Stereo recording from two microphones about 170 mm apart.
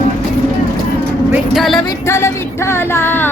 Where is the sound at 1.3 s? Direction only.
Centre (ahead or behind).